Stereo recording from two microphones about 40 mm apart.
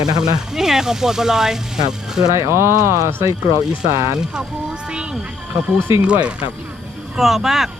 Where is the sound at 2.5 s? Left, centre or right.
Right.